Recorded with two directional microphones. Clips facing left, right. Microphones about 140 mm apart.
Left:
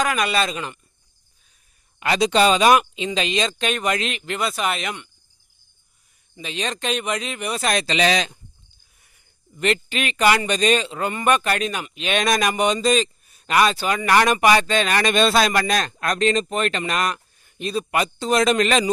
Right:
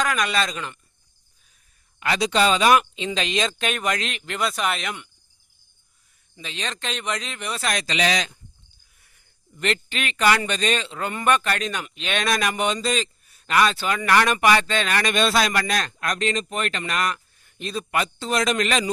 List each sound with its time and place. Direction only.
0.0 s speech: 10° left (ahead or behind)
2.0 s a man's voice: 25° left (ahead or behind)
3.2 s speech: centre (ahead or behind)
6.3 s speech: 15° left (ahead or behind)
7.6 s a man's voice: 25° left (ahead or behind)
9.6 s a man's voice: 10° left (ahead or behind); by 18.9 s 30° left (ahead or behind)